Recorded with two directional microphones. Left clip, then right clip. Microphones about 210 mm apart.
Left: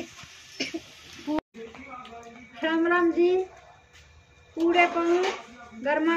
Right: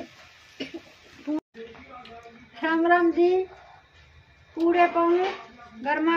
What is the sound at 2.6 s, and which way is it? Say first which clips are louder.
Speech: right 2 dB; 20° right (ahead or behind).